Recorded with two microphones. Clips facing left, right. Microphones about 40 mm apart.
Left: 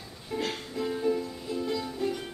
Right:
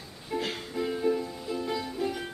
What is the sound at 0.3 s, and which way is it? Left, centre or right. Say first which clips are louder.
Music: even; centre.